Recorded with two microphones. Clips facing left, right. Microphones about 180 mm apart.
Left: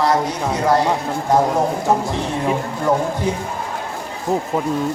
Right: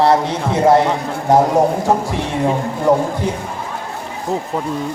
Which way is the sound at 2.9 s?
10° right (ahead or behind).